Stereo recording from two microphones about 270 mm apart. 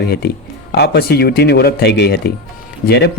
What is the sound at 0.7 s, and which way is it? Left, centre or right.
Speech, left.